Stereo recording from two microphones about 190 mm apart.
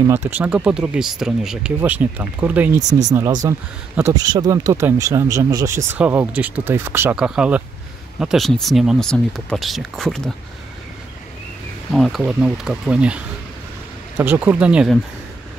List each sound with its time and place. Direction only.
0.0 s speech: 15° right (ahead or behind)
3.1 s speech: 20° right (ahead or behind); by 10.3 s 5° left (ahead or behind)
11.9 s speech: centre (ahead or behind)